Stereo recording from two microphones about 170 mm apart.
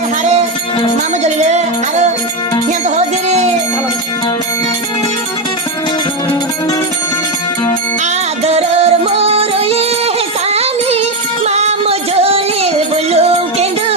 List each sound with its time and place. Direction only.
1.2 s music: 40° right (ahead or behind)
3.2 s music: 40° right (ahead or behind)
8.4 s music: 35° right (ahead or behind)